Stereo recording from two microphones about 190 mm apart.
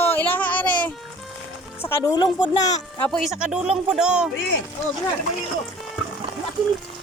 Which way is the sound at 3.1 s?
Centre (ahead or behind).